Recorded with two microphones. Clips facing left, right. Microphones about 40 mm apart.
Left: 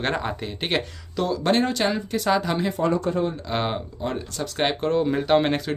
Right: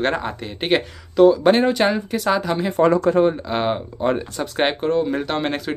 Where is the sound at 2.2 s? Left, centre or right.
Centre.